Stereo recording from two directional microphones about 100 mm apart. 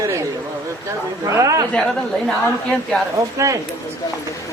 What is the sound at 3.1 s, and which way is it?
Speech, 30° right (ahead or behind).